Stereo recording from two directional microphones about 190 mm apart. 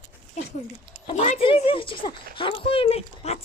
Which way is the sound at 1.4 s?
30° left (ahead or behind).